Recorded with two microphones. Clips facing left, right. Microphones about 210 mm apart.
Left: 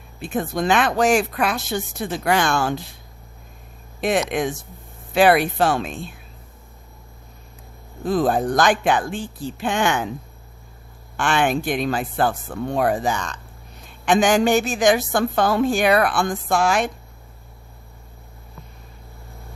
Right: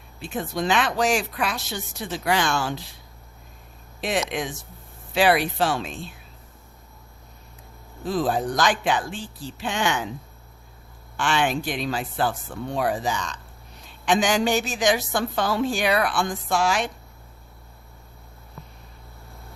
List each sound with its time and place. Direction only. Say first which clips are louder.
0.2 s a woman's voice: left 4 dB; 50° left (ahead or behind)
4.0 s a woman's voice: left 5 dB; 50° left (ahead or behind)
8.0 s a woman's voice: left 4 dB; 50° left (ahead or behind)
11.2 s a woman's voice: left 3 dB; 50° left (ahead or behind)